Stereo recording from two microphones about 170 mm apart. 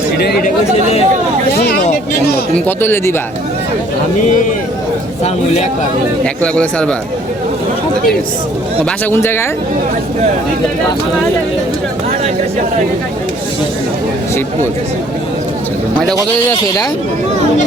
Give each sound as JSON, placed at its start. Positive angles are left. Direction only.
{"t": 0.4, "sound": "speech", "side_deg": 40}
{"t": 1.5, "sound": "a sound", "side_deg": 65}
{"t": 2.6, "sound": "speech", "side_deg": 15}
{"t": 6.2, "sound": "speech", "side_deg": 5}
{"t": 8.8, "sound": "speech", "side_deg": 15}
{"t": 16.1, "sound": "a man's voice", "side_deg": 20}